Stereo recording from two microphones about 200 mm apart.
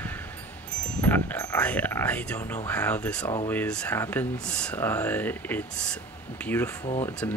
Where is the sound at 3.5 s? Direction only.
5° left (ahead or behind).